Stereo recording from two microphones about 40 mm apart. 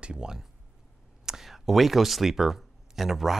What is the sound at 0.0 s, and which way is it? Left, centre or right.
Speech, right.